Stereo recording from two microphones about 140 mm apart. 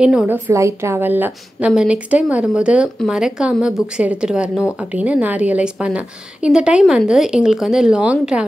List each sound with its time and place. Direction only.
0.0 s a woman's voice: 5° right (ahead or behind)
0.5 s a woman's voice: 20° right (ahead or behind)